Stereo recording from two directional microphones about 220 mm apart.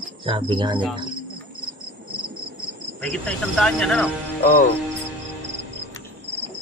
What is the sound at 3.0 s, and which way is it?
Speech, 5° left (ahead or behind).